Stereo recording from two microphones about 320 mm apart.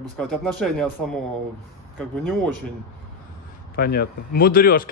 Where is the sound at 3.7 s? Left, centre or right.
Left.